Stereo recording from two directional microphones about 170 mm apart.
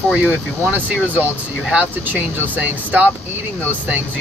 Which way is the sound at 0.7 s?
10° right (ahead or behind).